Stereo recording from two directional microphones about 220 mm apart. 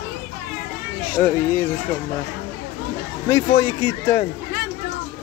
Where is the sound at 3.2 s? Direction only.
20° left (ahead or behind).